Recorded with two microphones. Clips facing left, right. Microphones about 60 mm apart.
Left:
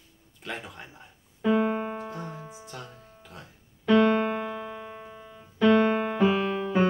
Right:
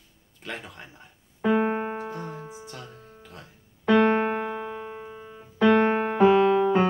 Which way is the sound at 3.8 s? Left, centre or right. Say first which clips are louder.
Right 1 dB; right.